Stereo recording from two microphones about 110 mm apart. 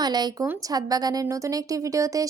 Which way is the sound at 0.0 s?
40° right (ahead or behind).